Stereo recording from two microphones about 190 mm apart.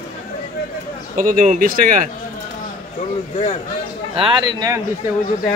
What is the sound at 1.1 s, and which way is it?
Speech, 45° right (ahead or behind).